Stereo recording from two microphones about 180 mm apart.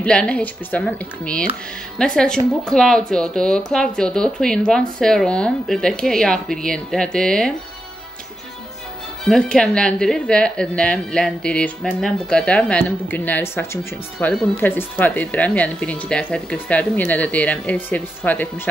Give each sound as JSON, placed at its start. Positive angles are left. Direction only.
{"t": 0.0, "sound": "speech", "side_deg": 5}
{"t": 9.2, "sound": "speech", "side_deg": 5}